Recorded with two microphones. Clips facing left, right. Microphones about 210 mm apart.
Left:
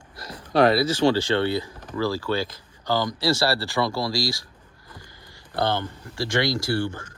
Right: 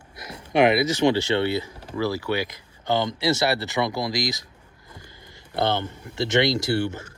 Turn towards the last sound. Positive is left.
turn(degrees=-20)  # may be behind; listen again after turning